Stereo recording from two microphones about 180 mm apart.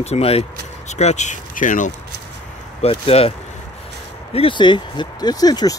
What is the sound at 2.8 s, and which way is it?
Speech, 35° left (ahead or behind).